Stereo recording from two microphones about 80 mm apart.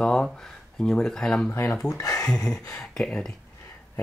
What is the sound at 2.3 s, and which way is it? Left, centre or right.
Speech, centre.